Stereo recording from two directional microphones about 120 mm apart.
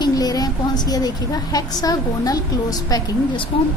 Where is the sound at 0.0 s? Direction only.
30° left (ahead or behind).